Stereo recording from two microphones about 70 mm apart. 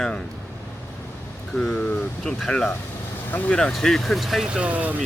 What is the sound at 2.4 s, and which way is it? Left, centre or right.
Speech, centre.